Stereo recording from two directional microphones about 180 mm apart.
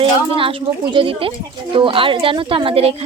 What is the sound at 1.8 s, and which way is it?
A woman's voice, 30° right (ahead or behind).